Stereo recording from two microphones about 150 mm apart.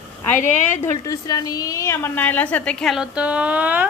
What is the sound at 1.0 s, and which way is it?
A woman's voice, 20° left (ahead or behind).